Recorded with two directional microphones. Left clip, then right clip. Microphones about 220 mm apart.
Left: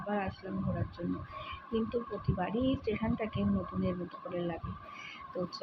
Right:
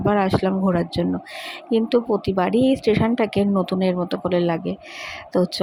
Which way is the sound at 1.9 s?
50° right (ahead or behind).